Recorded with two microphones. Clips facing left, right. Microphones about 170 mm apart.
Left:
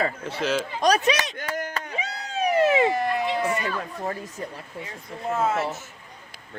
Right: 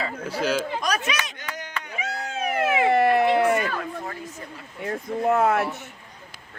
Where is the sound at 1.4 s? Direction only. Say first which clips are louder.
Left 5 dB; 50° left (ahead or behind).